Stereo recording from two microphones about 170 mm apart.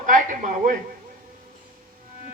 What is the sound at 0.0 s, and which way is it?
Speech, 50° right (ahead or behind).